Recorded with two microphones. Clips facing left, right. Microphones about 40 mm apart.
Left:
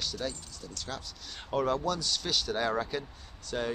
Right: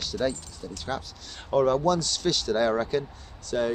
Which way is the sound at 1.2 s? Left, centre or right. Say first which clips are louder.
Right 7 dB; centre.